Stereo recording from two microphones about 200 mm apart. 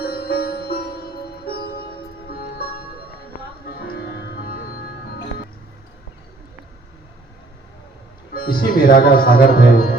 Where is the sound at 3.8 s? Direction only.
50° left (ahead or behind).